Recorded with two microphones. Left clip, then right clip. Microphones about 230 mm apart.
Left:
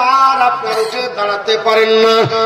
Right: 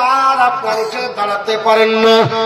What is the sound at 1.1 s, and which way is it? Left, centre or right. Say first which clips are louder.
Music: left 2 dB; left.